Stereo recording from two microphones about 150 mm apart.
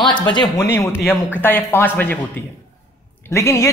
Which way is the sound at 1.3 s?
15° left (ahead or behind).